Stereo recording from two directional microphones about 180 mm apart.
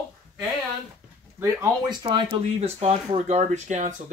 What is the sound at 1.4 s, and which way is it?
Speech, 20° right (ahead or behind).